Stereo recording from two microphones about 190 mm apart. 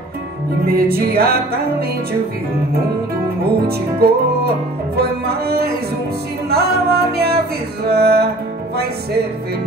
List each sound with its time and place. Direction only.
0.7 s music: 50° right (ahead or behind)
4.0 s music: 55° right (ahead or behind)